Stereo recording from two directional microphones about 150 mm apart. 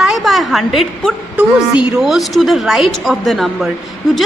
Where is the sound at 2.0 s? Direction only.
Centre (ahead or behind).